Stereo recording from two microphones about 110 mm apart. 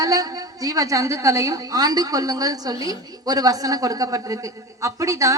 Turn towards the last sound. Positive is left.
turn(degrees=-30)  # may be behind; listen again after turning